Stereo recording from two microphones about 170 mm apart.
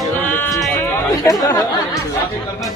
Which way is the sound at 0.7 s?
15° left (ahead or behind).